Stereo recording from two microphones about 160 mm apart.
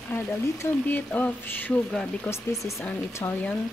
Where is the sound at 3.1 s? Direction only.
15° left (ahead or behind).